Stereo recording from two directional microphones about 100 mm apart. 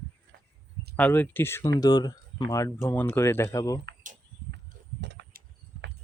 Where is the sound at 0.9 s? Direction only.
20° left (ahead or behind).